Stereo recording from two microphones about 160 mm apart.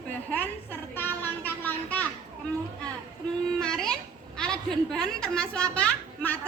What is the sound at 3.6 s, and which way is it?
A child's voice, 5° left (ahead or behind).